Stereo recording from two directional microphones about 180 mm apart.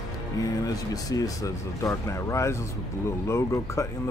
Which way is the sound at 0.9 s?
20° left (ahead or behind).